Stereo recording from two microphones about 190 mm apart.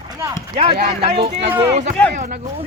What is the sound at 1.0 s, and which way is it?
Speech, 30° right (ahead or behind).